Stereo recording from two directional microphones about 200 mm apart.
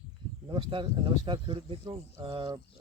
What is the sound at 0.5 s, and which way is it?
Speech, 25° right (ahead or behind).